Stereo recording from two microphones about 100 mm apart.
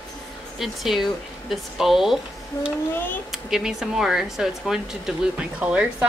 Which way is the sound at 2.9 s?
20° left (ahead or behind).